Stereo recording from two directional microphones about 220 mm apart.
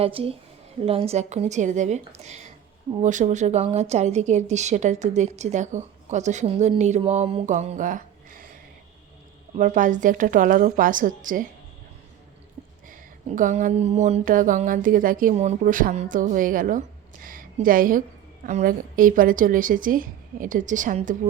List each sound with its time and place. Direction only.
0.0 s speech: 25° right (ahead or behind)
9.6 s speech: 35° right (ahead or behind)
12.9 s a woman's voice: 35° right (ahead or behind)